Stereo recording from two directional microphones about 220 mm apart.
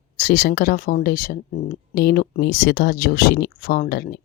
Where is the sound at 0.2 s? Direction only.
45° left (ahead or behind).